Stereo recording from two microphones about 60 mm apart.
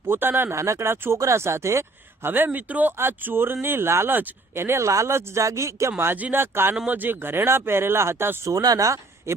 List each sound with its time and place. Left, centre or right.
0.1 s speech: right
0.5 s speech: right
2.2 s speech: right
4.9 s speech: right
6.3 s speech: right
8.4 s speech: right